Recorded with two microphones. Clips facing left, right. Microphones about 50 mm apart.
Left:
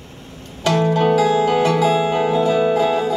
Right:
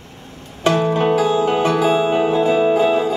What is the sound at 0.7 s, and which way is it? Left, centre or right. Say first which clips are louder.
Music: even; right.